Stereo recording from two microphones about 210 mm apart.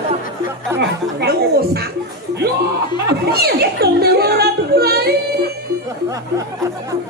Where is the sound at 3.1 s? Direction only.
50° right (ahead or behind).